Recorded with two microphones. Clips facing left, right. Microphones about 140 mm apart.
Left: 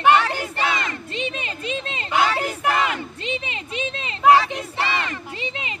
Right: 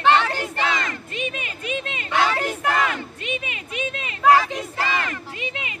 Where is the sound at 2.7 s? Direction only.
20° left (ahead or behind).